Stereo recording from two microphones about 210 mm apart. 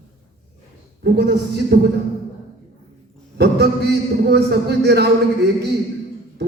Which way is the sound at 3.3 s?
50° right (ahead or behind).